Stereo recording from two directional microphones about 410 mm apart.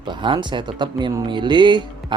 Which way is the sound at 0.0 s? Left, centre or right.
Centre.